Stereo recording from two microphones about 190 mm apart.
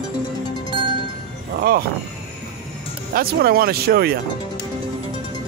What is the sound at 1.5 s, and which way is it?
Speech, 50° right (ahead or behind).